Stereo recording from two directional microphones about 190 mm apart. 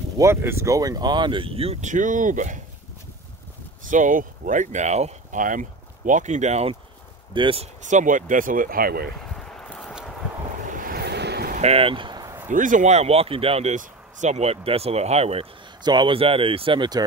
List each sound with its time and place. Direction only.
0.2 s speech: 15° right (ahead or behind); by 2.6 s 40° right (ahead or behind)
3.9 s speech: 45° right (ahead or behind); by 7.6 s 25° right (ahead or behind)
7.8 s speech: 40° right (ahead or behind)
9.3 s a sound: 5° left (ahead or behind)
10.7 s boat: 50° right (ahead or behind)
11.5 s a sound: 35° right (ahead or behind)
12.4 s speech: 45° right (ahead or behind); by 17.0 s 25° right (ahead or behind)